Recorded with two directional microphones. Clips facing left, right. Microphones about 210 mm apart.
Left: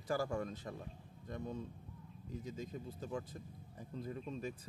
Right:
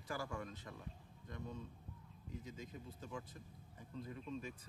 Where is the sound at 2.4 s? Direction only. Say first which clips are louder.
Left 9 dB; 35° left (ahead or behind).